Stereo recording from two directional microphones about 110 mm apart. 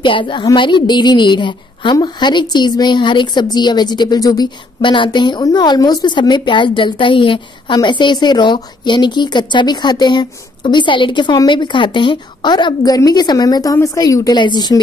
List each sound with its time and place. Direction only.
0.0 s a woman's voice: 50° left (ahead or behind)